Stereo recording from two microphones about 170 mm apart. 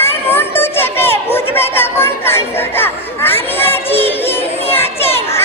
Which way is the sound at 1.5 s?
15° left (ahead or behind).